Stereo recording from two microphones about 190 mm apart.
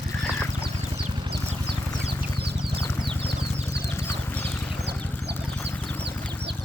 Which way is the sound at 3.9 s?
10° left (ahead or behind).